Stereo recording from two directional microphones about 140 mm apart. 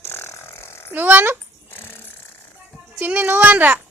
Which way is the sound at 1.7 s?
15° left (ahead or behind).